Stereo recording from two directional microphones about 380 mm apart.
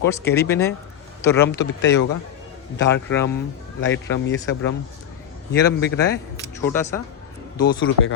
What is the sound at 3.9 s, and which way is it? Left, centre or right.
Speech, left.